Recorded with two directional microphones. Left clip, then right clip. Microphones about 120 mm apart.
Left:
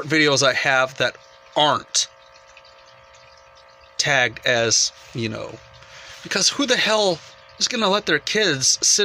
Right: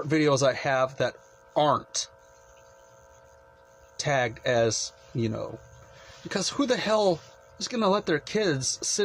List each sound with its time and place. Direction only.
0.1 s speech: 20° right (ahead or behind)
3.9 s speech: 20° right (ahead or behind)